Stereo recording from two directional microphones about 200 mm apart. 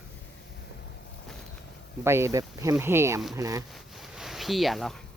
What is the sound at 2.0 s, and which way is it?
Speech, 15° right (ahead or behind).